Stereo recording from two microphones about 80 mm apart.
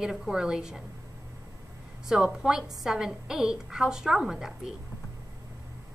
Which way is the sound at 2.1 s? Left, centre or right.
Centre.